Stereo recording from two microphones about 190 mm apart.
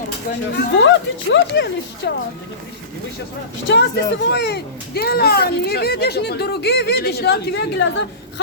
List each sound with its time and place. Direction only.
0.5 s speech: 75° left (ahead or behind)
3.7 s speech: 60° left (ahead or behind)